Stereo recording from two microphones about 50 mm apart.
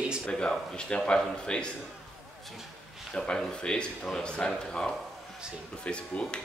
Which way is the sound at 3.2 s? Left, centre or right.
Centre.